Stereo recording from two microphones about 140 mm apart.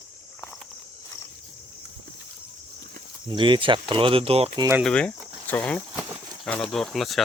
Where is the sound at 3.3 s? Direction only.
35° right (ahead or behind).